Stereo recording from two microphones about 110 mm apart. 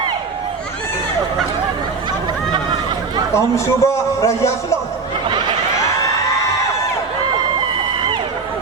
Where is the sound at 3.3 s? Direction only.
30° left (ahead or behind).